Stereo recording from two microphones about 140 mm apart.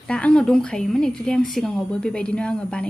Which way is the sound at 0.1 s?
5° left (ahead or behind).